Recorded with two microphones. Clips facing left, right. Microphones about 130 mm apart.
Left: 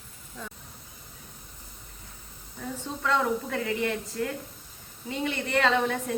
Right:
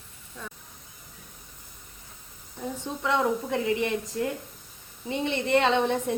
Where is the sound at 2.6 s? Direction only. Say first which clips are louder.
Right 2 dB; 20° right (ahead or behind).